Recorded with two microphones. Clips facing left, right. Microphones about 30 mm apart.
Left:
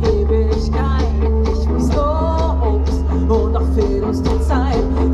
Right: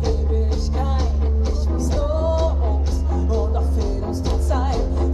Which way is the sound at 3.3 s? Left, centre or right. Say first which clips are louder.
Left 9 dB; left.